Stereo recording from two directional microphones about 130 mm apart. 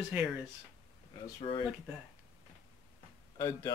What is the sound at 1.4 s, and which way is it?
Speech, 45° left (ahead or behind).